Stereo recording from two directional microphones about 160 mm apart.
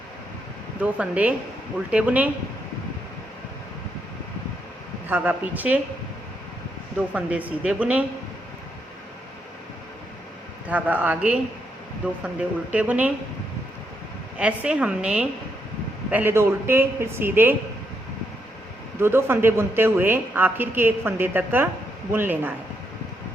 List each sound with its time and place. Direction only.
0.8 s a man's voice: 10° right (ahead or behind)
5.0 s a man's voice: 10° right (ahead or behind)
7.1 s a man's voice: 10° right (ahead or behind)
10.7 s a man's voice: 10° right (ahead or behind)
14.3 s a man's voice: 5° right (ahead or behind)
18.9 s a man's voice: 15° right (ahead or behind)